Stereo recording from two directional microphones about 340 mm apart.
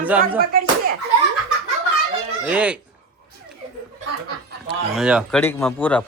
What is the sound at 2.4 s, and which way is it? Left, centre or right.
Speech, centre.